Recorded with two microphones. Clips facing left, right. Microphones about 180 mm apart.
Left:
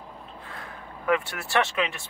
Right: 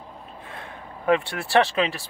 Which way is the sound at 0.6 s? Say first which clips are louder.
Right 2 dB; 30° right (ahead or behind).